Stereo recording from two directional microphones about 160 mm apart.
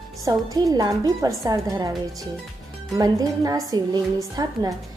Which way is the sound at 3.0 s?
20° right (ahead or behind).